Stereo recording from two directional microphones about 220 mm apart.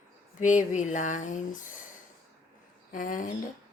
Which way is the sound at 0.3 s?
35° left (ahead or behind).